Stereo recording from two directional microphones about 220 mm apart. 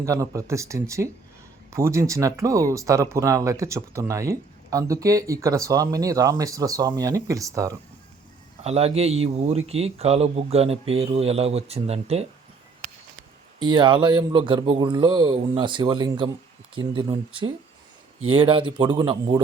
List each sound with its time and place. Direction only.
0.0 s speech: 15° right (ahead or behind)
8.6 s speech: 30° right (ahead or behind)
13.6 s speech: 20° right (ahead or behind)